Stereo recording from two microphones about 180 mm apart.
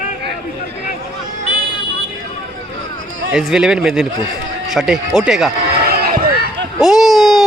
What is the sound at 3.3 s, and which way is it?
Speech, 5° right (ahead or behind).